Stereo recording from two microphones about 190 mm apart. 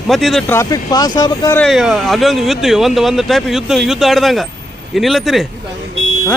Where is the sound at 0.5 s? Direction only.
20° left (ahead or behind).